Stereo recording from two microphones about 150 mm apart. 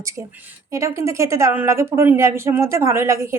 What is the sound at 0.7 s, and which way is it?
Speech, 20° right (ahead or behind).